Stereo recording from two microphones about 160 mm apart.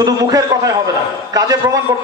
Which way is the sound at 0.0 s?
20° right (ahead or behind).